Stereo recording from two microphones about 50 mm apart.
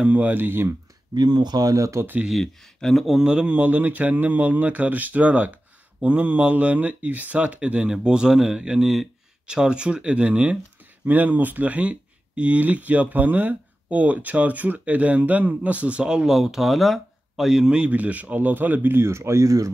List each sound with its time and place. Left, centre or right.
0.0 s speech: right
0.4 s speech: right
1.8 s speech: right
2.3 s speech: centre
3.2 s speech: centre
3.5 s speech: right
11.1 s speech: right
16.0 s speech: centre
17.9 s speech: right
18.9 s speech: right